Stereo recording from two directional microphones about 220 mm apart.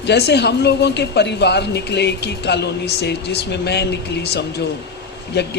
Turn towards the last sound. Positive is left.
turn(degrees=50)  # may be behind; listen again after turning